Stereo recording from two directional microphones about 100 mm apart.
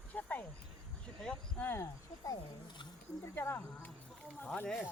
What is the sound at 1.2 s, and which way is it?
Speech, 20° left (ahead or behind).